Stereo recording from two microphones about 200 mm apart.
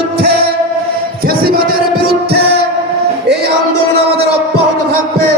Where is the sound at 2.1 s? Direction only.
55° right (ahead or behind).